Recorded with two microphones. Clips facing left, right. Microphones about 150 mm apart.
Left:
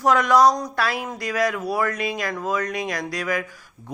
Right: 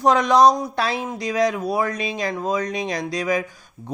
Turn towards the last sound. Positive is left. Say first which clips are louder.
# right 3 dB
turn(degrees=-20)  # may be behind; listen again after turning